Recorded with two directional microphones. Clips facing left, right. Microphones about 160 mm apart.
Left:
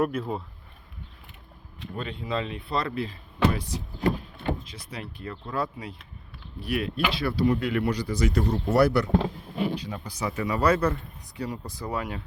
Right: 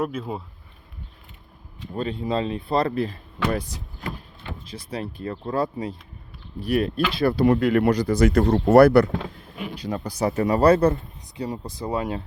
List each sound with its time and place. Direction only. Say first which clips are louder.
0.0 s speech: left 1 dB; centre (ahead or behind)
2.0 s speech: right 6 dB; 35° right (ahead or behind)
4.6 s speech: right 7 dB; 35° right (ahead or behind); by 9.0 s 55° right (ahead or behind)
9.1 s a sound: left 5 dB; 35° left (ahead or behind)
9.8 s speech: right 7 dB; 45° right (ahead or behind); by 12.2 s 25° right (ahead or behind)